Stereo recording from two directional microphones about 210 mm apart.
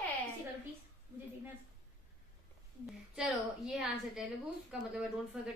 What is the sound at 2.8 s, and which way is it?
A woman's voice, centre (ahead or behind).